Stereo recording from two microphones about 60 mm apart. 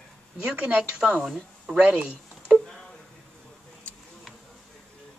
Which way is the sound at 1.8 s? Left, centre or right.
Centre.